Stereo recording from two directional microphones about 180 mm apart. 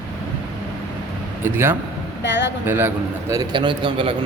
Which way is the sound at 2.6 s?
10° right (ahead or behind).